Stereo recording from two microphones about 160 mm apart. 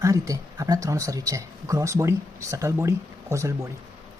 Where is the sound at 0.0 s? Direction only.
20° right (ahead or behind).